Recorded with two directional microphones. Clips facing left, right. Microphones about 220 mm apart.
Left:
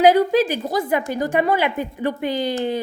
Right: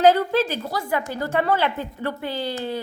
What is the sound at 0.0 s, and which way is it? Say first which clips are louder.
A woman's voice: left 3 dB; 15° left (ahead or behind).